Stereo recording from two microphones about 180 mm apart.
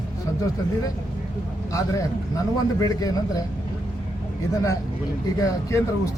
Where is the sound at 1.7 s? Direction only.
15° left (ahead or behind).